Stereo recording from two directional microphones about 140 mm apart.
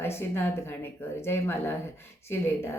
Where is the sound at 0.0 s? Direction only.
15° left (ahead or behind).